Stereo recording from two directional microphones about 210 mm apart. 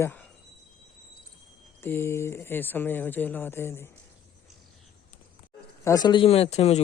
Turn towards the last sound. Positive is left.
turn(degrees=30)  # may be behind; listen again after turning